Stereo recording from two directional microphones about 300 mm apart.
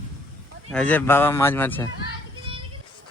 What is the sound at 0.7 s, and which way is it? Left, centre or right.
Speech, centre.